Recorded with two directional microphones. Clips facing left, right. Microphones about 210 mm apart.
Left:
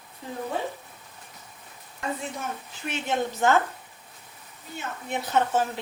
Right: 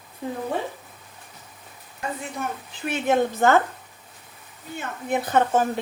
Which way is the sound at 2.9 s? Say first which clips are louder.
Right 7 dB; 55° right (ahead or behind).